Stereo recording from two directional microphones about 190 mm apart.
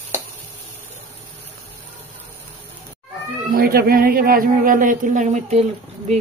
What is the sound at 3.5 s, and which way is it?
A woman's voice, 50° right (ahead or behind).